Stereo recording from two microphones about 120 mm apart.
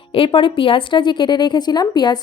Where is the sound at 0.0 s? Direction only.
50° left (ahead or behind).